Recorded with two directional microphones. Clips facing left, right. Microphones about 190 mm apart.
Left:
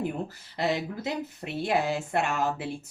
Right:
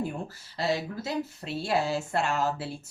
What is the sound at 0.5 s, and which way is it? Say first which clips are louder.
Speech: left 1 dB; 20° left (ahead or behind).